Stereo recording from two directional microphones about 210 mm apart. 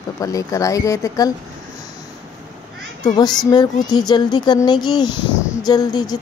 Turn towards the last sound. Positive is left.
turn(degrees=20)  # may be behind; listen again after turning